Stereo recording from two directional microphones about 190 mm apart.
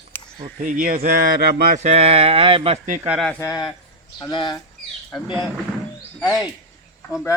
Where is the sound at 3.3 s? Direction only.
15° left (ahead or behind).